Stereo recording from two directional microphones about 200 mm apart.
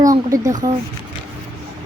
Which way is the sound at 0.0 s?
15° right (ahead or behind).